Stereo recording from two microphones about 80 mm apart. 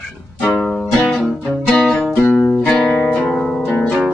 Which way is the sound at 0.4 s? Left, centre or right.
Centre.